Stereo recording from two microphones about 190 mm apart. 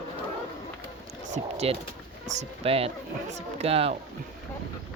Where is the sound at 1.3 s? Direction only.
35° right (ahead or behind).